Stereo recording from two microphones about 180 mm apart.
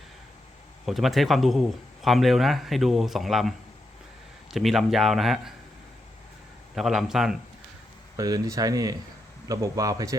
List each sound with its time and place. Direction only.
0.9 s a man's voice: centre (ahead or behind)
4.5 s a man's voice: centre (ahead or behind)
6.7 s a man's voice: centre (ahead or behind)
8.1 s speech: 20° right (ahead or behind)